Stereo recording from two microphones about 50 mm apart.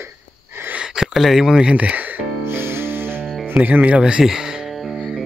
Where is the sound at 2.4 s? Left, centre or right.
Right.